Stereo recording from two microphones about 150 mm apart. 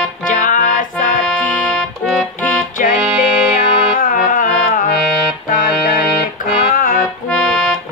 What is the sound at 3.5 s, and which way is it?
Music, 65° left (ahead or behind).